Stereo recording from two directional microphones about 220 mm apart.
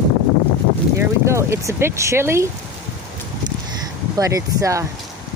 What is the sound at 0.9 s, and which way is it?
Speech, 10° right (ahead or behind).